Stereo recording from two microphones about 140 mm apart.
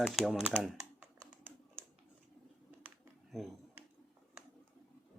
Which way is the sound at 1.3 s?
15° right (ahead or behind).